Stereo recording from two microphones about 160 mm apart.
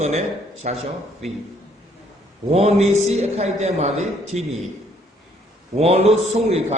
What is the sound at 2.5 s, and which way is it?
A man's voice, 40° right (ahead or behind).